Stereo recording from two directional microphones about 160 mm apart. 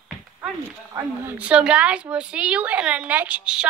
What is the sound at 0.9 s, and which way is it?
A woman's voice, 10° right (ahead or behind).